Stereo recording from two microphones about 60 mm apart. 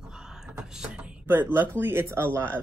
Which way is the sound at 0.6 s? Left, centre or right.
Centre.